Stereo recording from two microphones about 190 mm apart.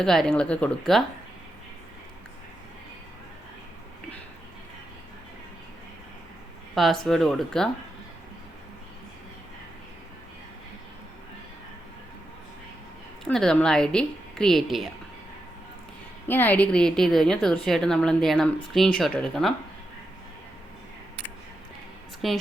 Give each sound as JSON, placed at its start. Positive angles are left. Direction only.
{"t": 0.0, "sound": "speech", "side_deg": 5}
{"t": 6.7, "sound": "speech", "side_deg": 0}
{"t": 13.2, "sound": "speech", "side_deg": 5}
{"t": 16.2, "sound": "speech", "side_deg": 10}
{"t": 22.2, "sound": "speech", "side_deg": 0}